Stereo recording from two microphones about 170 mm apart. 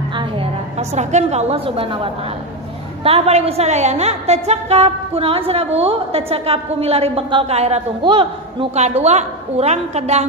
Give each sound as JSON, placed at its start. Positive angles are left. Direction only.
{"t": 0.1, "sound": "a woman's voice", "side_deg": -30}